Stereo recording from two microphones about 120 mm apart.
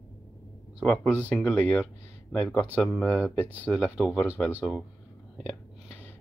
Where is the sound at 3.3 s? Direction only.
15° right (ahead or behind).